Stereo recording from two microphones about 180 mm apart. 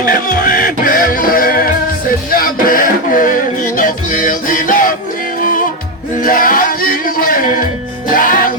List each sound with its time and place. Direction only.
0.0 s music: 50° left (ahead or behind)